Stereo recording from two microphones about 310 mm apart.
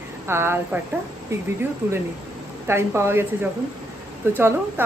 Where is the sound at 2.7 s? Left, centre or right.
Centre.